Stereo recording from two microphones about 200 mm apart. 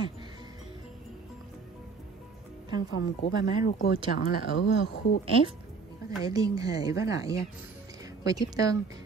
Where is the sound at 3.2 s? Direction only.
40° left (ahead or behind).